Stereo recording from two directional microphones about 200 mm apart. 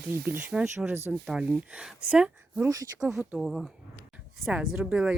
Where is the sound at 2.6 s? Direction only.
15° right (ahead or behind).